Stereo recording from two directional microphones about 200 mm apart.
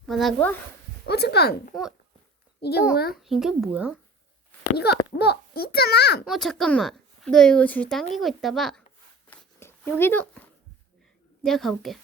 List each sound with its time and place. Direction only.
0.0 s speech: centre (ahead or behind)
1.0 s a child's voice: 55° left (ahead or behind)
3.2 s speech: centre (ahead or behind)
5.1 s a child's voice: 55° left (ahead or behind)
6.2 s speech: centre (ahead or behind)
9.3 s a sound: 10° left (ahead or behind)
10.0 s speech: 10° left (ahead or behind)